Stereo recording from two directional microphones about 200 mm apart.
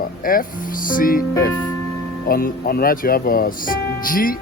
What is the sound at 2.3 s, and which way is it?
Speech, 45° left (ahead or behind).